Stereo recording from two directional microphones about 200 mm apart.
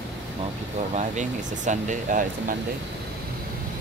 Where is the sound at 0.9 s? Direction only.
35° right (ahead or behind).